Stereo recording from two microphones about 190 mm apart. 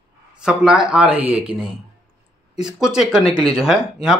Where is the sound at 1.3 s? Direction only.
35° right (ahead or behind).